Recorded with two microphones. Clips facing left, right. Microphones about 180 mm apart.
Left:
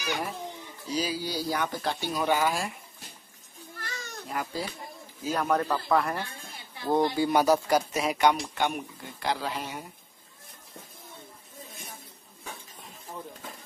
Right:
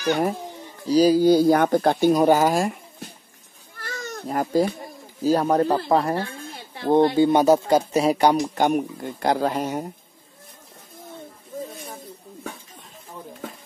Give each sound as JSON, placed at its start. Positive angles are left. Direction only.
{"t": 0.0, "sound": "speech", "side_deg": -45}
{"t": 3.8, "sound": "goat", "side_deg": -50}
{"t": 5.2, "sound": "speech", "side_deg": -35}